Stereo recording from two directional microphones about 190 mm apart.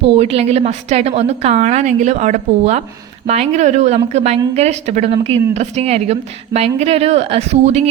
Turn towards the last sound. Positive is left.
turn(degrees=-35)  # may be behind; listen again after turning